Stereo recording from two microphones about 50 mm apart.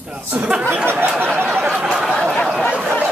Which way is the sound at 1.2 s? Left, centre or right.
Right.